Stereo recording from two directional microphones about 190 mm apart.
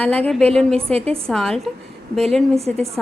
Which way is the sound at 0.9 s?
30° right (ahead or behind).